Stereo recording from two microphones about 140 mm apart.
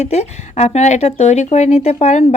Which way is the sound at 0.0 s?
50° left (ahead or behind).